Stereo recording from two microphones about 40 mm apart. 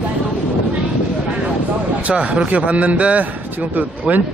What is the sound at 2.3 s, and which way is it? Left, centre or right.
Speech, right.